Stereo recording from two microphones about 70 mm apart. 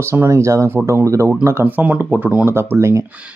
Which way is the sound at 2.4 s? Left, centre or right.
Right.